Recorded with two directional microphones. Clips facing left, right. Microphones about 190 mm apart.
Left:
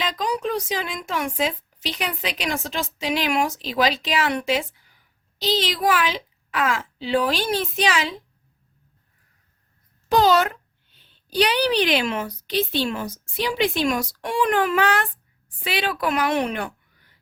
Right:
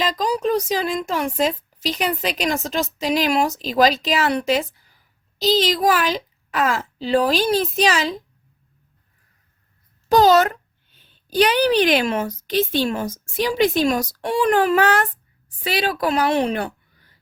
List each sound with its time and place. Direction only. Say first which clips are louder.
0.0 s a woman's voice: right 4 dB; 40° right (ahead or behind)
10.1 s a child's voice: right 4 dB; 40° right (ahead or behind)